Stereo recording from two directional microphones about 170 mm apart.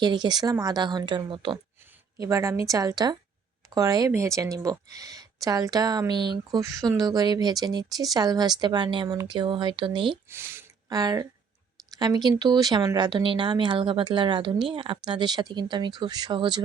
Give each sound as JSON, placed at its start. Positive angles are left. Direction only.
{"t": 0.0, "sound": "speech", "side_deg": -25}
{"t": 10.2, "sound": "speech", "side_deg": -15}